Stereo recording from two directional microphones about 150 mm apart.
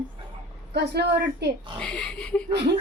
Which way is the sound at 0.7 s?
90° right.